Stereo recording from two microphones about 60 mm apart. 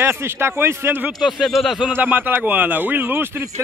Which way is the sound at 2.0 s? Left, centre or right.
Right.